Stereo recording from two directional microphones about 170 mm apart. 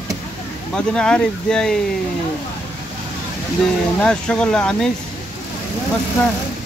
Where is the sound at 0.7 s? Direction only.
5° left (ahead or behind).